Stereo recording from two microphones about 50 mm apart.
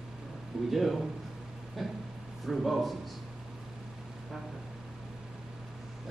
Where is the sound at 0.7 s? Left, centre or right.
Centre.